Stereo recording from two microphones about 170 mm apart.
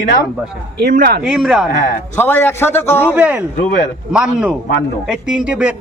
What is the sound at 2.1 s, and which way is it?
A man's voice, 10° left (ahead or behind).